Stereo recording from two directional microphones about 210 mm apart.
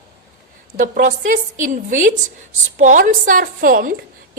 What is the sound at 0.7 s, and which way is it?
A woman's voice, 40° right (ahead or behind).